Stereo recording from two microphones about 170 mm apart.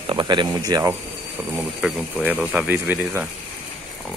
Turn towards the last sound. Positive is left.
turn(degrees=-10)  # may be behind; listen again after turning